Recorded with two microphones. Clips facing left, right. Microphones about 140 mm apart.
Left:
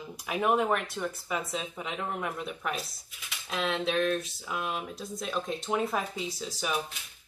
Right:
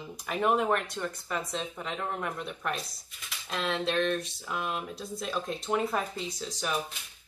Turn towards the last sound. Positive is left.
turn(degrees=5)  # may be behind; listen again after turning